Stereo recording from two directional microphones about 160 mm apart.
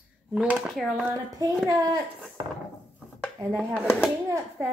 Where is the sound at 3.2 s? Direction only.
5° left (ahead or behind).